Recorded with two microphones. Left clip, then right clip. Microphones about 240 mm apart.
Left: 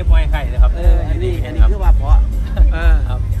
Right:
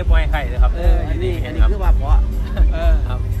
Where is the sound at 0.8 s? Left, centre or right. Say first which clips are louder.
Left 1 dB; centre.